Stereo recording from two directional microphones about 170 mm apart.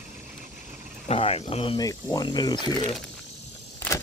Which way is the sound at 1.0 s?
40° left (ahead or behind).